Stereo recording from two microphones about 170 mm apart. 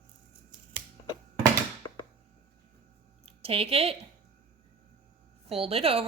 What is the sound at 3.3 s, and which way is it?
Speech, 35° right (ahead or behind).